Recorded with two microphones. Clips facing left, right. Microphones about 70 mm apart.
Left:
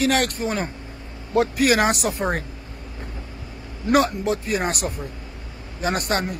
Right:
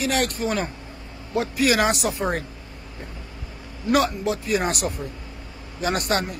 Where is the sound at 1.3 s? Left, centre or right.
Left.